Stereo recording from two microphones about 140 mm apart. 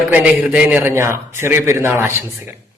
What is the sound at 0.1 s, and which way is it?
A man's voice, 10° right (ahead or behind).